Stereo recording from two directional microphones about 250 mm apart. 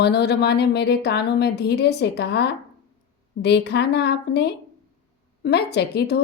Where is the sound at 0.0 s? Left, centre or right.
Left.